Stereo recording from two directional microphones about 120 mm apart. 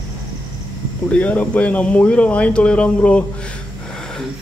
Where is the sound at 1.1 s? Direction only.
10° left (ahead or behind).